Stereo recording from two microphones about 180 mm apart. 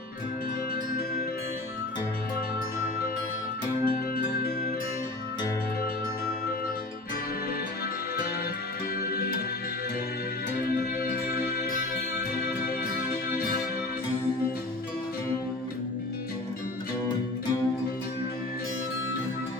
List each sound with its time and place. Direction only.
3.8 s music: 55° left (ahead or behind)
11.0 s music: 55° left (ahead or behind)